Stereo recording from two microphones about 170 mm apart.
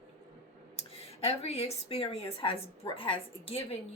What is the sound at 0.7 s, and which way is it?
Speech, 35° left (ahead or behind).